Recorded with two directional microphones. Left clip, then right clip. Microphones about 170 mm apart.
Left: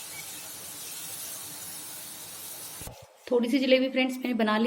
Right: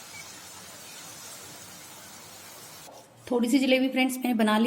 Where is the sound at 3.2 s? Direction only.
60° right (ahead or behind).